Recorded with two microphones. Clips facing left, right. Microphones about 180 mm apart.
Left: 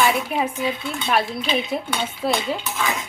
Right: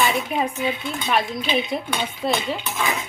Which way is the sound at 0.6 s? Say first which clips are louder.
Even; 10° right (ahead or behind).